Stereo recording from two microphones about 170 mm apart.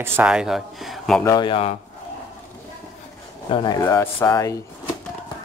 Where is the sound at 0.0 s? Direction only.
10° right (ahead or behind).